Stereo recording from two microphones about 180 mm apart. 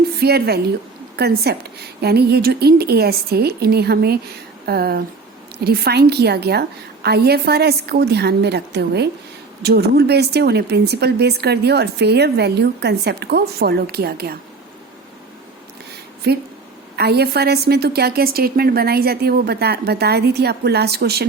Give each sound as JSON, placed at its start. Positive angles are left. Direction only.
{"t": 0.2, "sound": "a woman's voice", "side_deg": -60}
{"t": 16.3, "sound": "a woman's voice", "side_deg": -65}